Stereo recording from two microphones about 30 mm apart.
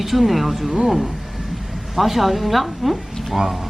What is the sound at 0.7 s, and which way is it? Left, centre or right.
Speech, centre.